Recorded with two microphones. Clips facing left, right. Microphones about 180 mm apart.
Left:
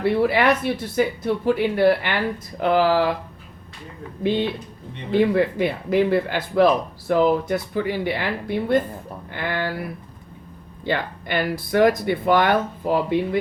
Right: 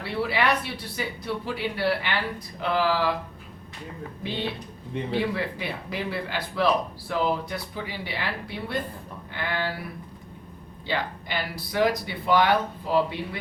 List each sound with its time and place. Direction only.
0.0 s speech: 50° left (ahead or behind)
4.2 s speech: 55° left (ahead or behind)
10.8 s speech: 55° left (ahead or behind)